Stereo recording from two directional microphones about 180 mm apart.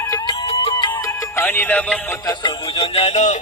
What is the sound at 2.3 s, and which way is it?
Music, 25° left (ahead or behind).